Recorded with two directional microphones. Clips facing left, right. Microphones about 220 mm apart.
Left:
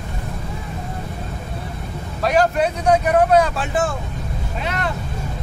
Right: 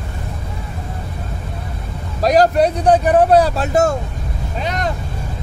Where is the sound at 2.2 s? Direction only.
35° right (ahead or behind).